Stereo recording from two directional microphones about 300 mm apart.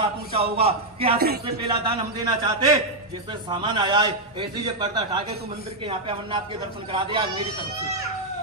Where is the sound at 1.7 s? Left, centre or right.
Centre.